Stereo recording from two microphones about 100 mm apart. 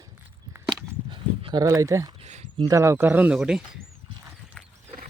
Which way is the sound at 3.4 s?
5° right (ahead or behind).